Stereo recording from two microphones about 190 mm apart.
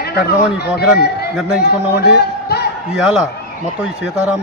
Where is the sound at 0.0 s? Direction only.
55° left (ahead or behind).